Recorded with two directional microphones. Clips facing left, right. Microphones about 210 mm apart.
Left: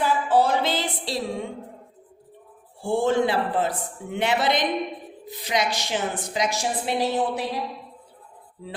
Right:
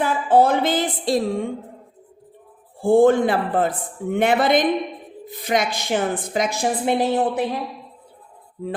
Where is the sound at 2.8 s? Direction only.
50° right (ahead or behind).